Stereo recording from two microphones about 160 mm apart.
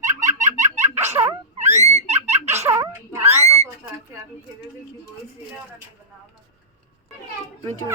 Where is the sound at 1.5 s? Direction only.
45° right (ahead or behind).